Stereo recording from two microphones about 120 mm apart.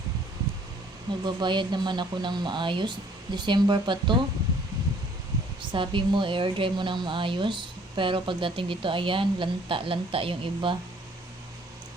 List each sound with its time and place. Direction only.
1.2 s speech: 40° right (ahead or behind)
5.7 s a woman's voice: 45° right (ahead or behind)